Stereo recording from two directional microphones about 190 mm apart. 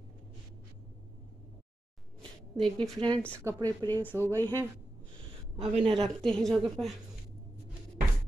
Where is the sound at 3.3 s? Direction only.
15° right (ahead or behind).